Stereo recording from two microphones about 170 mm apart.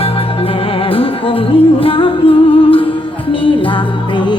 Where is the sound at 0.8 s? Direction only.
35° left (ahead or behind).